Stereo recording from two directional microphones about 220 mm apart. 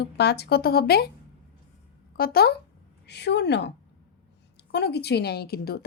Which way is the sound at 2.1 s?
45° left (ahead or behind).